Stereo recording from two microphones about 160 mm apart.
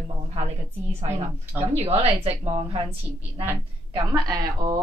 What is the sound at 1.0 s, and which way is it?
A woman's voice, 40° right (ahead or behind).